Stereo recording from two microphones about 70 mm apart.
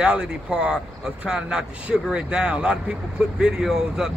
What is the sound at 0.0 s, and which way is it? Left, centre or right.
Speech, centre.